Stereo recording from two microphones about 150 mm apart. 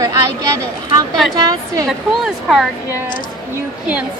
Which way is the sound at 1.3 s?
25° right (ahead or behind).